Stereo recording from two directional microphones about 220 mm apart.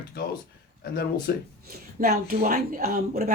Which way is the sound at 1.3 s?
45° left (ahead or behind).